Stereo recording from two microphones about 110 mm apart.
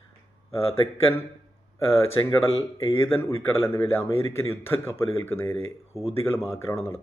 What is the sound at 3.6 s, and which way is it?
Speech, 30° left (ahead or behind).